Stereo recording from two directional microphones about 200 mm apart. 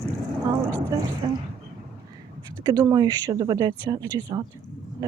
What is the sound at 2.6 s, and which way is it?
Speech, 20° right (ahead or behind).